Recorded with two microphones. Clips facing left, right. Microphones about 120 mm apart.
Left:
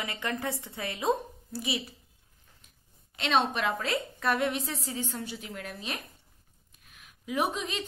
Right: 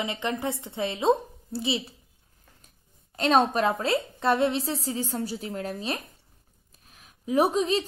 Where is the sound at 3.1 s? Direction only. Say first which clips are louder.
Right 6 dB; 40° right (ahead or behind).